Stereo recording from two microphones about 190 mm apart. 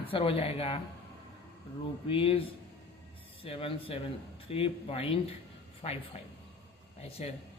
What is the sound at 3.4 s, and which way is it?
A man's voice, 30° left (ahead or behind).